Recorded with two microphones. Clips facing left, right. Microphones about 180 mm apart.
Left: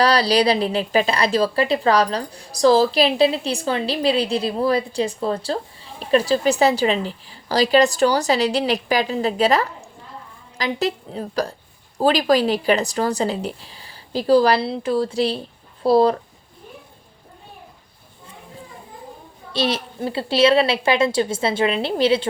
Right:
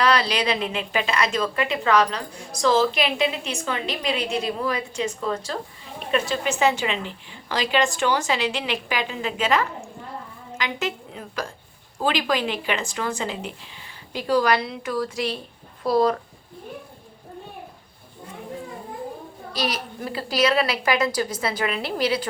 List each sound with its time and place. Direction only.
0.0 s a woman's voice: 35° left (ahead or behind)
19.5 s a woman's voice: 30° left (ahead or behind)